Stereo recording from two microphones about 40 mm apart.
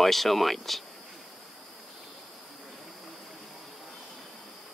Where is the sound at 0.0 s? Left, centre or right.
Centre.